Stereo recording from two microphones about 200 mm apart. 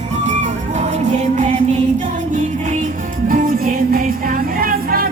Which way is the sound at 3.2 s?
45° right (ahead or behind).